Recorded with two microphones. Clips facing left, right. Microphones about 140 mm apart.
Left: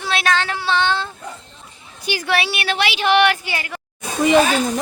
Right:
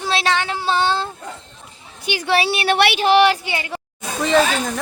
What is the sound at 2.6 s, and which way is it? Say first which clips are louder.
Speech: right 5 dB; 60° right (ahead or behind).